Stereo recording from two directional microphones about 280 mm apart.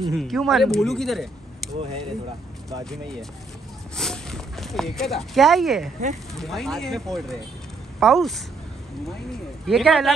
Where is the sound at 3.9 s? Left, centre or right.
Centre.